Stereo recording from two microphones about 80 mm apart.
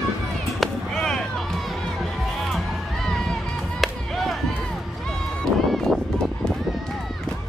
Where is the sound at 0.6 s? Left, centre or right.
Centre.